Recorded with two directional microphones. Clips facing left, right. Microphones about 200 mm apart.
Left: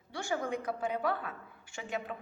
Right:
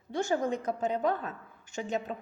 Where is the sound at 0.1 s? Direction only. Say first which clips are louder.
Right 5 dB; 20° right (ahead or behind).